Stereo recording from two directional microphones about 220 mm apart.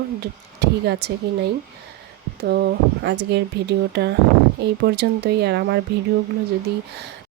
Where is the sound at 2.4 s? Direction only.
50° right (ahead or behind).